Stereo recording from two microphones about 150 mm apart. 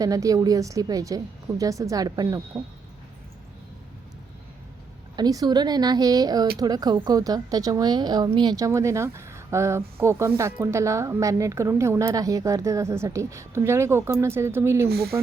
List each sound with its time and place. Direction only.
0.0 s a woman's voice: 25° right (ahead or behind)
5.1 s a woman's voice: 25° right (ahead or behind)
14.8 s speech: 90° right